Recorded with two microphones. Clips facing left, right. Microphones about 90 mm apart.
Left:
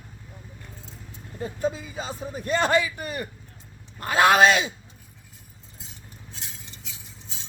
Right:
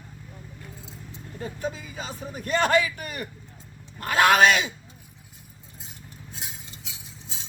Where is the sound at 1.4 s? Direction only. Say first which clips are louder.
Left 4 dB; 5° left (ahead or behind).